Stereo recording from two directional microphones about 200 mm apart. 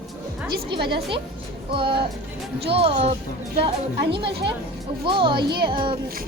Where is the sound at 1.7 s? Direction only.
25° right (ahead or behind).